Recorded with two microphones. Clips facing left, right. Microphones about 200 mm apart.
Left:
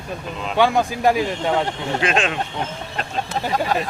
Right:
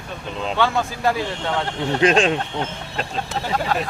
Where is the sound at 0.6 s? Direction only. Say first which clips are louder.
Left 4 dB; 15° left (ahead or behind).